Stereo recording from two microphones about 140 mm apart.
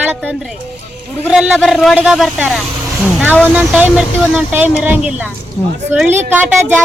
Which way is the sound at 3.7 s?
5° right (ahead or behind).